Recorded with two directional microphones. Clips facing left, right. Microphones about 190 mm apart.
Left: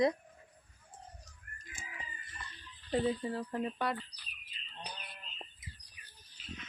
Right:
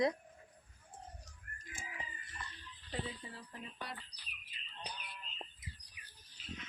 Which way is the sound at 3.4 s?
65° left (ahead or behind).